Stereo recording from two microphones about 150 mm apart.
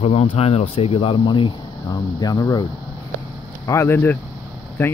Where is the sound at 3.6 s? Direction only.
20° left (ahead or behind).